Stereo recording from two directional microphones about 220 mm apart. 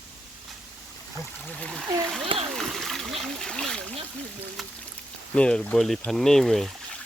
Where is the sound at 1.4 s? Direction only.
5° left (ahead or behind).